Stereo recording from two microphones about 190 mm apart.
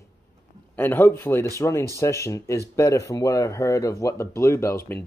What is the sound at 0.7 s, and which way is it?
Speech, 10° left (ahead or behind).